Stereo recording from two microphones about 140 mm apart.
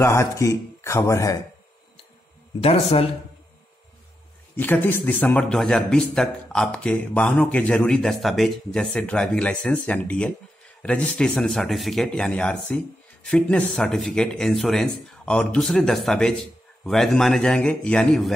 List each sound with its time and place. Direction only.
0.0 s speech: 20° left (ahead or behind)
2.6 s speech: 45° left (ahead or behind)
4.6 s speech: 15° left (ahead or behind)